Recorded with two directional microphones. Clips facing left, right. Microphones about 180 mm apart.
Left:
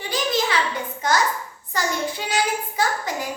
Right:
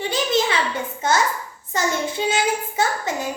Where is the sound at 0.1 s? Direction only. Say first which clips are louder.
Right 1 dB; 25° right (ahead or behind).